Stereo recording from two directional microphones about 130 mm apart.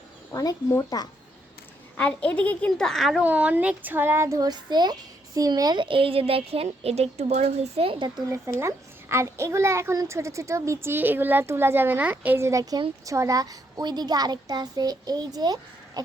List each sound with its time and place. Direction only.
0.3 s speech: 20° left (ahead or behind)
2.0 s a woman's voice: 10° left (ahead or behind)
3.2 s a child's voice: 10° right (ahead or behind); by 8.2 s 40° right (ahead or behind)
8.5 s a woman's voice: 20° right (ahead or behind)
16.0 s a sound: 30° right (ahead or behind)